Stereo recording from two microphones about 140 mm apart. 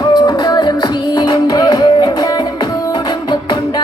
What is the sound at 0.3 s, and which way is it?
Music, 30° left (ahead or behind).